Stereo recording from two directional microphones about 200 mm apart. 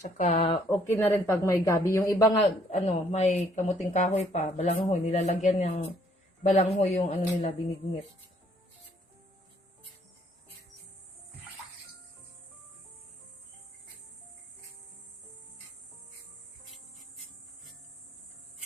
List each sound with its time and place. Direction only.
0.0 s speech: 35° left (ahead or behind)
0.7 s speech: 15° left (ahead or behind)
2.6 s speech: 30° left (ahead or behind)